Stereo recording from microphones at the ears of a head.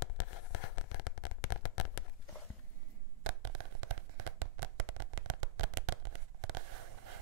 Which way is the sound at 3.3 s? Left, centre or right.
Right.